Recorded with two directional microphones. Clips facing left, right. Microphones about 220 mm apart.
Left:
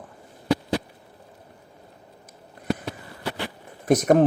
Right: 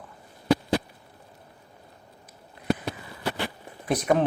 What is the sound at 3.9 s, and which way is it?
Speech, 45° left (ahead or behind).